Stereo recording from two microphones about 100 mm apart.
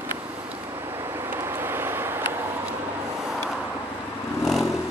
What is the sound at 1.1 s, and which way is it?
Vehicle, 25° right (ahead or behind).